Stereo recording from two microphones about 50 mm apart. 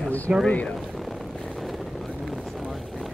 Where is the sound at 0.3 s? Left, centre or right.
Right.